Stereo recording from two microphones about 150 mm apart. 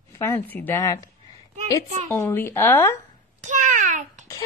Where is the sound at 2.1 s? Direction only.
15° left (ahead or behind).